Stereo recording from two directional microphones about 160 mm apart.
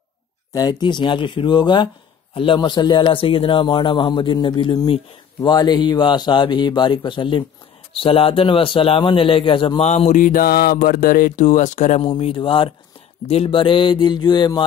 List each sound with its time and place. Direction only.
0.5 s speech: 25° left (ahead or behind)
9.8 s speech: 45° left (ahead or behind)
12.0 s speech: 35° left (ahead or behind)